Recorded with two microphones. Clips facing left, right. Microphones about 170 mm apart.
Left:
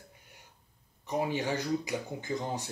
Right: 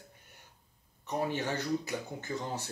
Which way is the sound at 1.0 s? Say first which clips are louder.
Left 2 dB; 10° left (ahead or behind).